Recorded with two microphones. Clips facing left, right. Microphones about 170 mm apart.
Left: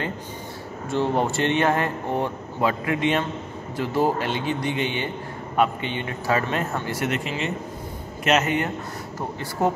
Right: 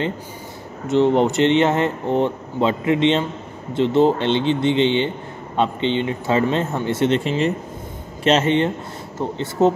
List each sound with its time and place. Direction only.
0.8 s speech: 20° right (ahead or behind)